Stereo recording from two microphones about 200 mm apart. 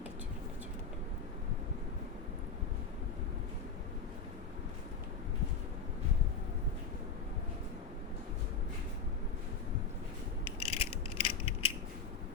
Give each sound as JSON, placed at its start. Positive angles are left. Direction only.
{"t": 10.6, "sound": "mechanisms", "side_deg": 30}